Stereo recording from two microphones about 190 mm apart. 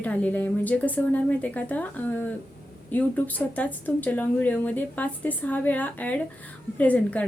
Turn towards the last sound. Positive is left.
turn(degrees=5)  # may be behind; listen again after turning